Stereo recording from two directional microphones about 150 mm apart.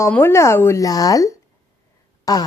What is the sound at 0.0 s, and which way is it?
Speech, 15° left (ahead or behind).